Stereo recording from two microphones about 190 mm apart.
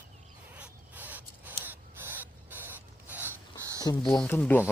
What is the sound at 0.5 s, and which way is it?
Gasp, 10° right (ahead or behind).